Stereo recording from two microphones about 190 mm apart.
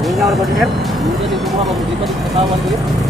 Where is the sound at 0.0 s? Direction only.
Centre (ahead or behind).